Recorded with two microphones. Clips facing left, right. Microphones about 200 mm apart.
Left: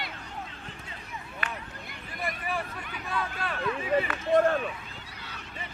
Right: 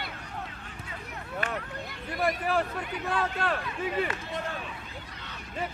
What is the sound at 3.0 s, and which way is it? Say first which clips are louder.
Speech: right 4 dB; 70° right (ahead or behind).